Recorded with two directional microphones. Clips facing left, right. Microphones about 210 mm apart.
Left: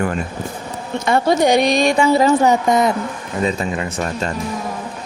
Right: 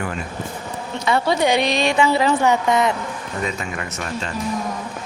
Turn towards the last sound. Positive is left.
turn(degrees=40)  # may be behind; listen again after turning